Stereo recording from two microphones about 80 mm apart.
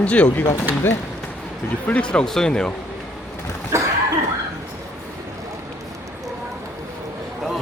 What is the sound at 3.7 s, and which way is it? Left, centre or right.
Cough, right.